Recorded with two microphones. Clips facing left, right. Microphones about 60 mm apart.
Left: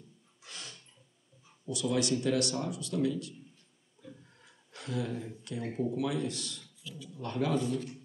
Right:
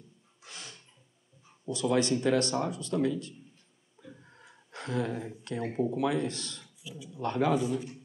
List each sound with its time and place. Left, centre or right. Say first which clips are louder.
0.4 s a sound: right 1 dB; right
1.7 s speech: right 3 dB; right
4.0 s a sound: right 1 dB; right
5.4 s speech: right 4 dB; right
5.7 s speech: right 2 dB; right
5.9 s speech: right 3 dB; right
6.6 s a sound: right 2 dB; centre
7.2 s speech: right 5 dB; right
7.5 s speech: right 2 dB; centre